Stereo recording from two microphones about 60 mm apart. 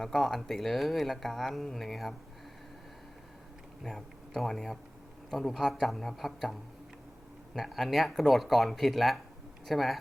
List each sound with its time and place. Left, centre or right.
0.0 s speech: centre
3.8 s speech: centre